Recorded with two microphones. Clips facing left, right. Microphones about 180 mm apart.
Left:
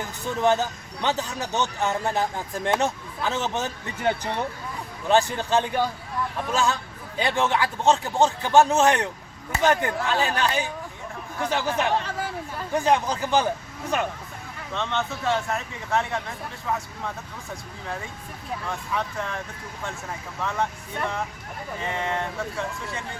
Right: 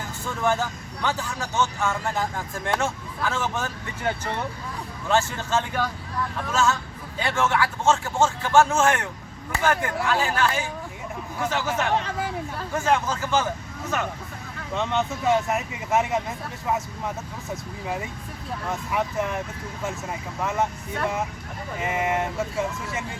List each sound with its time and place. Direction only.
0.4 s speech: 20° left (ahead or behind)
12.7 s speech: 15° left (ahead or behind)
14.7 s speech: 5° right (ahead or behind)
15.4 s speech: 20° right (ahead or behind)
17.5 s speech: 15° right (ahead or behind)
20.4 s speech: 20° right (ahead or behind)
21.8 s speech: 15° right (ahead or behind)